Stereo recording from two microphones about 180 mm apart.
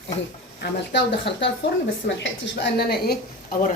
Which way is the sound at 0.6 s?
70° left (ahead or behind).